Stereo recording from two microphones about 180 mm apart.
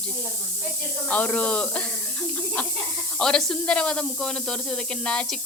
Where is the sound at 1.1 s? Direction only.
10° left (ahead or behind).